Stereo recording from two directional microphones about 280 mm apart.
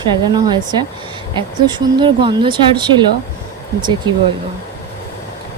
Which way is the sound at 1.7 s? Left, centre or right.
Centre.